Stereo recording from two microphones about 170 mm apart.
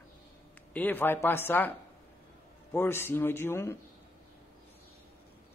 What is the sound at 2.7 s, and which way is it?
A man's voice, 15° left (ahead or behind).